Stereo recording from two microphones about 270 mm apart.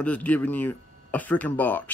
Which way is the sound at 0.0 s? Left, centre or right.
Centre.